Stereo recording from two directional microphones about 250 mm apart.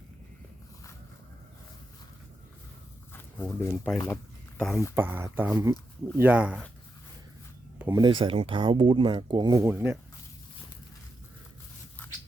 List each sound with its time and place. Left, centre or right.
3.1 s zipper: centre
4.6 s speech: centre
4.9 s speech: centre
7.8 s speech: centre